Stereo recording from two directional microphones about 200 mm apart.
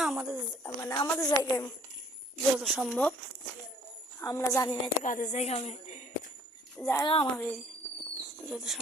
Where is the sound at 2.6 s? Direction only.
Centre (ahead or behind).